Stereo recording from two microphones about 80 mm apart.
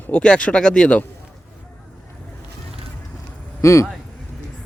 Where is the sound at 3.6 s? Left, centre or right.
Left.